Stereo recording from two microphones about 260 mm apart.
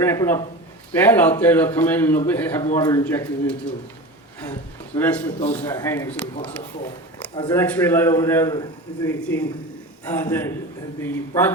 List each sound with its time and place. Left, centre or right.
0.0 s a man's voice: centre
4.9 s a man's voice: centre
7.3 s speech: centre
7.6 s a man's voice: centre